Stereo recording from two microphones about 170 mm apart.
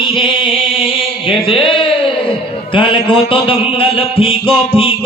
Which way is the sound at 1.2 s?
30° left (ahead or behind).